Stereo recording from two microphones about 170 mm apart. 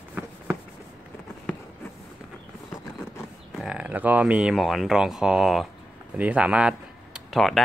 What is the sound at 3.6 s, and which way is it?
Speech, 5° right (ahead or behind).